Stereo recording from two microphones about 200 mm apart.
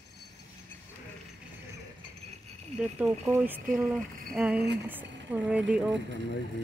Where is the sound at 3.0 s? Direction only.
10° right (ahead or behind).